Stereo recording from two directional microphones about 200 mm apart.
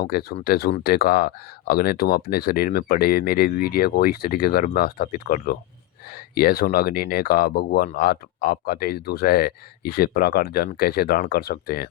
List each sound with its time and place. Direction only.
0.0 s speech: 50° left (ahead or behind)